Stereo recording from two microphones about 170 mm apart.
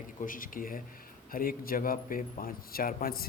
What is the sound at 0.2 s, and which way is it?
Speech, 55° left (ahead or behind).